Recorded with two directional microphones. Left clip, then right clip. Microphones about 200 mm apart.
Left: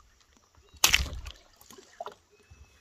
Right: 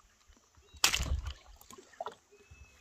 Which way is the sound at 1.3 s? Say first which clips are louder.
Left 2 dB; 15° left (ahead or behind).